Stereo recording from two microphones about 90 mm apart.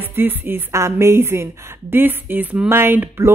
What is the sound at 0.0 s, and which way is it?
Speech, 25° right (ahead or behind).